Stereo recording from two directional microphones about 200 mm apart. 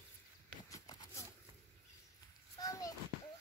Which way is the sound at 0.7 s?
20° left (ahead or behind).